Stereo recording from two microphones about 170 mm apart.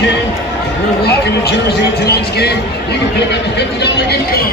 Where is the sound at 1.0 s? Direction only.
80° left.